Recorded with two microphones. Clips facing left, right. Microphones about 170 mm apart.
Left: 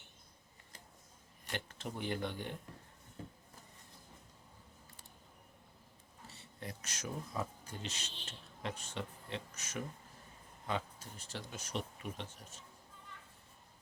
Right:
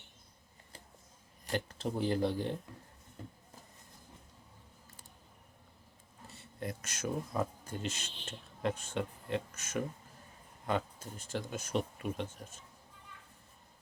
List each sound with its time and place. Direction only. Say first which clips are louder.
1.5 s speech: right 8 dB; 35° right (ahead or behind)
6.3 s speech: right 7 dB; 50° right (ahead or behind)